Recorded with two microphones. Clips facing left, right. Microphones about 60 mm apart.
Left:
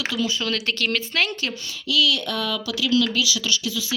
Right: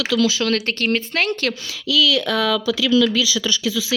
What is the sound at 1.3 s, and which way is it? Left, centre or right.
Speech, right.